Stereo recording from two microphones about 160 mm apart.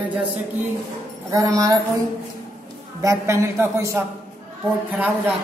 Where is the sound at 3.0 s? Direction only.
20° right (ahead or behind).